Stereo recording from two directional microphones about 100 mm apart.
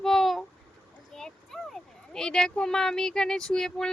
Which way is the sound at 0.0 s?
Centre (ahead or behind).